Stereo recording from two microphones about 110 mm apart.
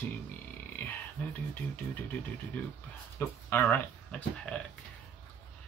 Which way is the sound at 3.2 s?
20° left (ahead or behind).